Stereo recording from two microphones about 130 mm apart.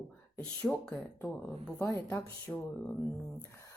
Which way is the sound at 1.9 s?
20° left (ahead or behind).